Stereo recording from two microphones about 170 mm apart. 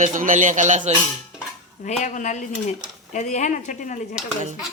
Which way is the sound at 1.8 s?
45° left (ahead or behind).